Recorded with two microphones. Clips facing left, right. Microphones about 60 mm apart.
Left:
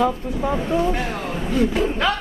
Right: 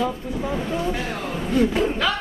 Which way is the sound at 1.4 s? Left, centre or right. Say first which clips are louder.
Even; centre.